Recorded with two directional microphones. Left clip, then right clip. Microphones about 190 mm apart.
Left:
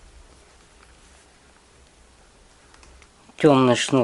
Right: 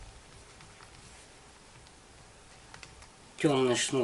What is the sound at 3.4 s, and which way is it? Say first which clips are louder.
Speech: left 11 dB; 25° left (ahead or behind).